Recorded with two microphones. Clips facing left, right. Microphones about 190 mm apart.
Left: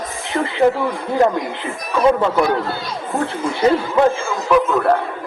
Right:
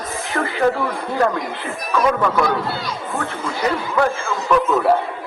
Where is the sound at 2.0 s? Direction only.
25° left (ahead or behind).